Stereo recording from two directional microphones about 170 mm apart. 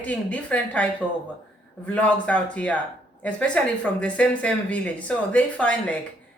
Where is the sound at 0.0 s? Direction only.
10° left (ahead or behind).